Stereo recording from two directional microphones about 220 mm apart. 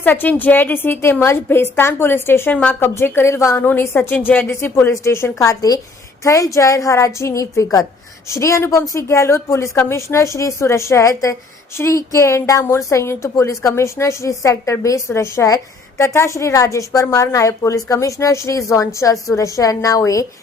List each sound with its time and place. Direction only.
0.0 s a woman's voice: 10° left (ahead or behind)